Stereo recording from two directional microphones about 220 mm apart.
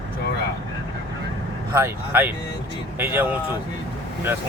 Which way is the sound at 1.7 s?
10° right (ahead or behind).